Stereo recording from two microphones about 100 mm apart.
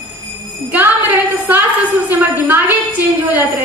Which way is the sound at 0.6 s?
15° right (ahead or behind).